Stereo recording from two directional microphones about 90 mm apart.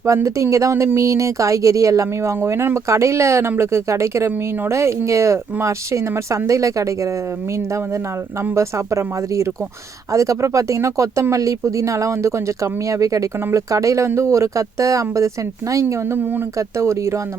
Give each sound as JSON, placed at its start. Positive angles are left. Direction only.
{"t": 0.0, "sound": "speech", "side_deg": -35}
{"t": 8.5, "sound": "speech", "side_deg": -30}